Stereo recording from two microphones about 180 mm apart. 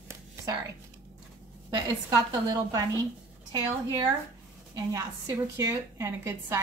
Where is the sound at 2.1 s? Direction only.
20° right (ahead or behind).